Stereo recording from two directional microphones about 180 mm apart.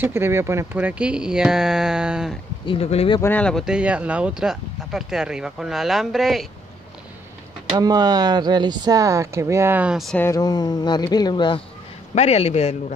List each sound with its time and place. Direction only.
0.0 s speech: 15° right (ahead or behind)
2.6 s speech: 30° left (ahead or behind)
3.2 s speech: 10° left (ahead or behind)
7.7 s speech: 20° right (ahead or behind); by 10.1 s 5° right (ahead or behind)
10.1 s speech: 15° left (ahead or behind)
12.2 s speech: 35° left (ahead or behind)